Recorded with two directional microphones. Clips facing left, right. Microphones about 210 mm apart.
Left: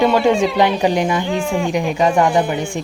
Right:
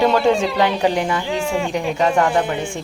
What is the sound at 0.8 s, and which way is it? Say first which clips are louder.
Speech: left 2 dB; 15° left (ahead or behind).